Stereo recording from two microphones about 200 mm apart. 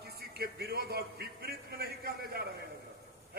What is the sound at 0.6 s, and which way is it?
A man's voice, 55° right (ahead or behind).